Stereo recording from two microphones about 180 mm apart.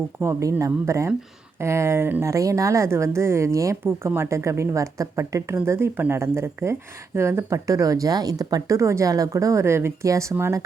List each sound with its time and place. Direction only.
0.2 s speech: 15° right (ahead or behind)